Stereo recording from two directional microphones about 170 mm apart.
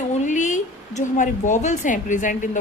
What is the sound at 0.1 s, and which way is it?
A woman's voice, 45° left (ahead or behind).